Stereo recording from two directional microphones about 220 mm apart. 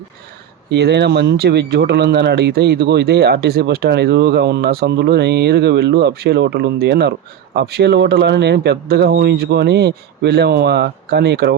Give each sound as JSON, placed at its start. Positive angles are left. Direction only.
{"t": 0.7, "sound": "speech", "side_deg": -50}